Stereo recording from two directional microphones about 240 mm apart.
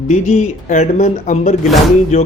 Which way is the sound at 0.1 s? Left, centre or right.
Left.